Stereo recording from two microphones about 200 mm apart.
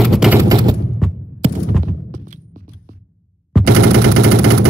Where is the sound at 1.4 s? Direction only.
30° right (ahead or behind).